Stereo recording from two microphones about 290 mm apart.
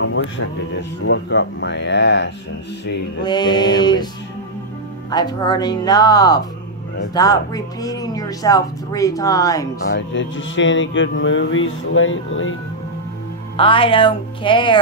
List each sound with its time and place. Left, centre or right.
0.0 s speech: left
3.3 s speech: centre
5.1 s speech: centre
9.8 s speech: left
13.6 s speech: centre